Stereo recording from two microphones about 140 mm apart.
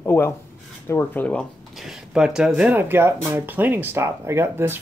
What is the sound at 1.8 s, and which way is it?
Speech, 5° right (ahead or behind).